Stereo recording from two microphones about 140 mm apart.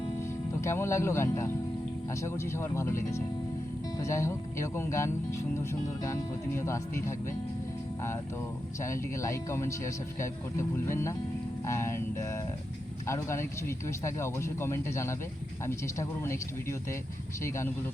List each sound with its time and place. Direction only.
0.2 s speech: 20° left (ahead or behind)
8.8 s speech: 20° left (ahead or behind)